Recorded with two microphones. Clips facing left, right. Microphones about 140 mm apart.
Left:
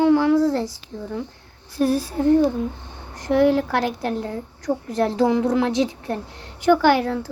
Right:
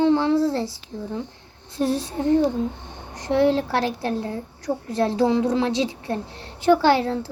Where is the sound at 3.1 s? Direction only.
20° right (ahead or behind).